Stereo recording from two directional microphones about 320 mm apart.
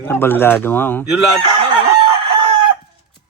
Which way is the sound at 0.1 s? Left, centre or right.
Centre.